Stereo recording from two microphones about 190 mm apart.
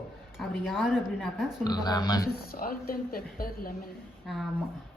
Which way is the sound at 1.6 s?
20° left (ahead or behind).